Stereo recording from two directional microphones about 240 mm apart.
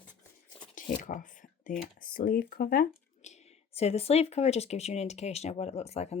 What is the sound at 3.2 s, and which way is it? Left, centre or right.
Speech, left.